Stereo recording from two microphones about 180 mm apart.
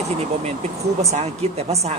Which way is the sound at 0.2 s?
35° right (ahead or behind).